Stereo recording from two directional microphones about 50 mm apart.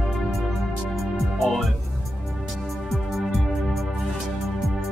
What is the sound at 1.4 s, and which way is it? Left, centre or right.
Music, centre.